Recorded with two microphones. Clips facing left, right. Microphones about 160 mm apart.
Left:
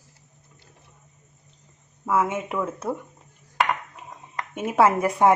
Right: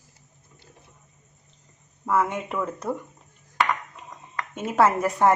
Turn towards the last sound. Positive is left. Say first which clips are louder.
# left 1 dB
turn(degrees=10)  # may be behind; listen again after turning